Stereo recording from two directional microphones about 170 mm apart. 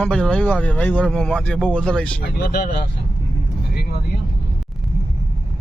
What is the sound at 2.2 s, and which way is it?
Speech, 60° left (ahead or behind).